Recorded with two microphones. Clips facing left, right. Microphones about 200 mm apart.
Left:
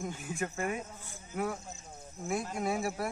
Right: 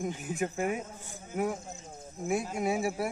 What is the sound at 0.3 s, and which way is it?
Speech, 15° right (ahead or behind).